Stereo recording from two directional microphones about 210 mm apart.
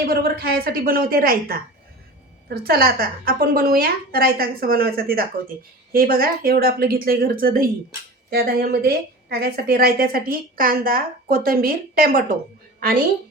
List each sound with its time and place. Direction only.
0.1 s a woman's voice: 45° right (ahead or behind)